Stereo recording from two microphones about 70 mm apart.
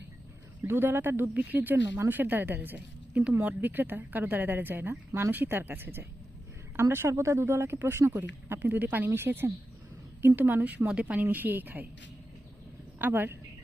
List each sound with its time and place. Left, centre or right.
0.6 s a woman's voice: right
13.0 s speech: right